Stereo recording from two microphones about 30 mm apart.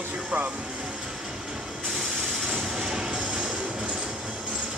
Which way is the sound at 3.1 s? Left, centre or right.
Right.